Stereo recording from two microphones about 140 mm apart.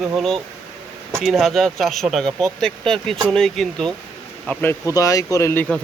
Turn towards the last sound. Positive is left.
turn(degrees=15)  # may be behind; listen again after turning